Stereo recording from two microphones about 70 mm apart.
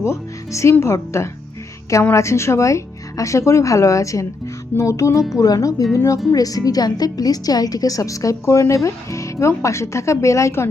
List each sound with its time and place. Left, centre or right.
0.0 s a woman's voice: left
6.3 s a woman's voice: left